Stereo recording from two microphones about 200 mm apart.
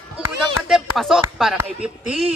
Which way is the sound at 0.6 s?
Centre (ahead or behind).